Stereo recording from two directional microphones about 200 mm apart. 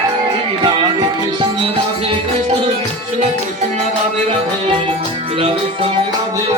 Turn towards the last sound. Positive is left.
turn(degrees=-30)  # may be behind; listen again after turning